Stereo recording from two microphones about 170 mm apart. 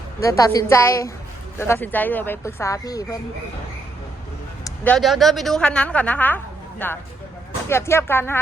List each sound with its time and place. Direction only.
0.2 s a woman's voice: 20° left (ahead or behind)
4.6 s a woman's voice: 10° left (ahead or behind)